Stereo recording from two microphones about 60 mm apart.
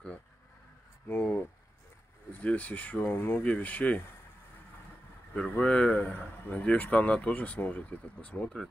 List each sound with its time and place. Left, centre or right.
1.0 s a sound: left
2.4 s speech: left
5.3 s speech: left